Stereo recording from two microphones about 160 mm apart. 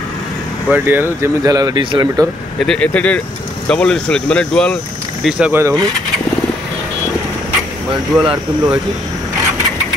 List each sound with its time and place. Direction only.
0.7 s speech: 10° right (ahead or behind); by 2.2 s 30° right (ahead or behind)
2.6 s speech: 5° left (ahead or behind)
5.2 s speech: 10° right (ahead or behind)
8.1 s speech: centre (ahead or behind)